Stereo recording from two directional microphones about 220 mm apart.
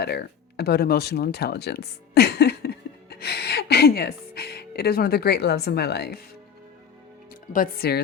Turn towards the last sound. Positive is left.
turn(degrees=45)  # may be behind; listen again after turning